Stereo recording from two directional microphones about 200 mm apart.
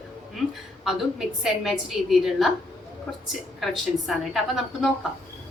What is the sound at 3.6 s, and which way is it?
A woman's voice, centre (ahead or behind).